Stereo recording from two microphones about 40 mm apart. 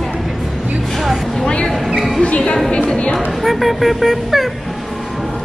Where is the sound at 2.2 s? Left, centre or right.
Left.